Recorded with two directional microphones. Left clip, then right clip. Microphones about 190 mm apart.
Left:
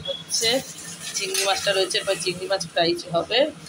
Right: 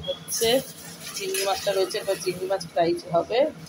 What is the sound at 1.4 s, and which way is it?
Speech, 5° right (ahead or behind).